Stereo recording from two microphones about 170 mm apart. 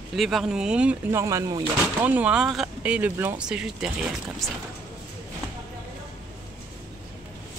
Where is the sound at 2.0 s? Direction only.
10° right (ahead or behind).